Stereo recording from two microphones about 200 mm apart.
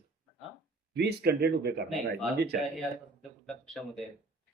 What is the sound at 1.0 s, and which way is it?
Speech, 55° right (ahead or behind).